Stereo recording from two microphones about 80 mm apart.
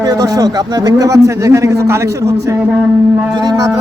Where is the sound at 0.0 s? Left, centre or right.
Right.